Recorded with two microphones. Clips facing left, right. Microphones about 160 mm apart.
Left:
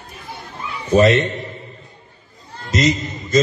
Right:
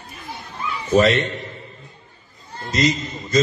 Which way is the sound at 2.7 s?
20° left (ahead or behind).